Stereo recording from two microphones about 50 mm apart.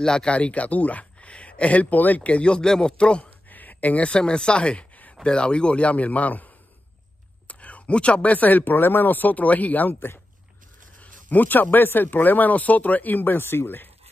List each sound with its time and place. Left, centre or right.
0.0 s speech: centre
3.4 s speech: left
9.9 s speech: left
11.0 s speech: left